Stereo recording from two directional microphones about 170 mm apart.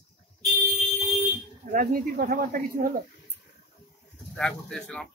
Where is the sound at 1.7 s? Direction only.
60° right (ahead or behind).